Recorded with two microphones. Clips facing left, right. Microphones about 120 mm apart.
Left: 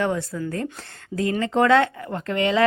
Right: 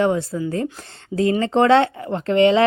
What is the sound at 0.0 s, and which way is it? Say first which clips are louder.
Speech: right 5 dB; 25° right (ahead or behind).